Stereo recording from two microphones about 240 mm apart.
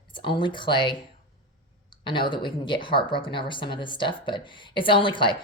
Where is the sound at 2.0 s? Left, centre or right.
Centre.